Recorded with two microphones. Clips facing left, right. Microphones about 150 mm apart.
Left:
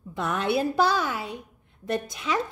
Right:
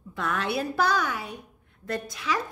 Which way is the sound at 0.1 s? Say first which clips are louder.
Left 3 dB; 20° left (ahead or behind).